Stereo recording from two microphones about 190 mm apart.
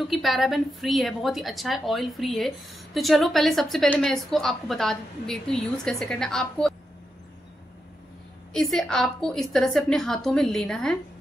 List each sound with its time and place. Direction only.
0.1 s a woman's voice: centre (ahead or behind)
8.5 s a woman's voice: centre (ahead or behind)